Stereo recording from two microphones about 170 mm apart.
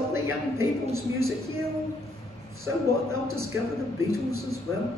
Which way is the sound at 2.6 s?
15° right (ahead or behind).